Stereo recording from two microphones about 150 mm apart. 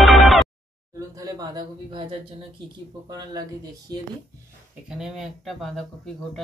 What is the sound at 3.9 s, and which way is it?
Speech, 25° right (ahead or behind).